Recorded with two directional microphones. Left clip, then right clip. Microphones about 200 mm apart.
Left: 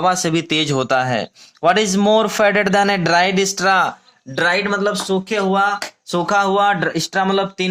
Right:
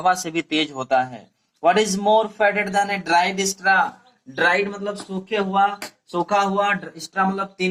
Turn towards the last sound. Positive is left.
turn(degrees=55)  # may be behind; listen again after turning